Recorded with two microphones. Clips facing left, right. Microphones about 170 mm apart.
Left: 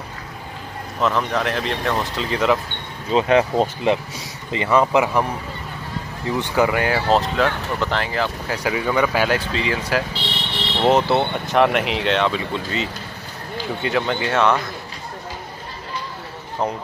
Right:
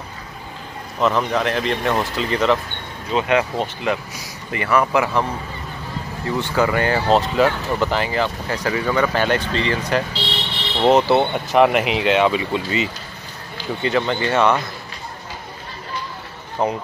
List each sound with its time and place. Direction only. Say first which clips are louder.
1.0 s speech: right 2 dB; centre (ahead or behind)
3.1 s speech: left 2 dB; 30° left (ahead or behind)
6.4 s speech: even; 15° left (ahead or behind); by 8.5 s centre (ahead or behind)
8.6 s speech: even; 10° left (ahead or behind)
16.6 s speech: right 3 dB; 5° right (ahead or behind)